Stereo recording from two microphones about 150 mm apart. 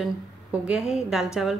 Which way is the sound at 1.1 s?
5° right (ahead or behind).